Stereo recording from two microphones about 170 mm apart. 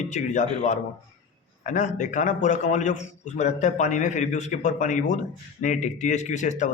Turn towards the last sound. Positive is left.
turn(degrees=45)  # may be behind; listen again after turning